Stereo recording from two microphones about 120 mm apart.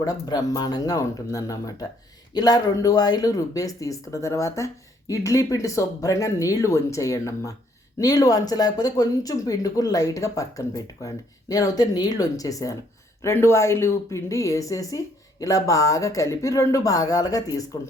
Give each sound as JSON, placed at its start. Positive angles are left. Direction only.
{"t": 0.0, "sound": "speech", "side_deg": 30}